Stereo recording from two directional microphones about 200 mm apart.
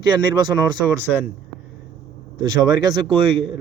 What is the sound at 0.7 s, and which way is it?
Speech, 20° right (ahead or behind).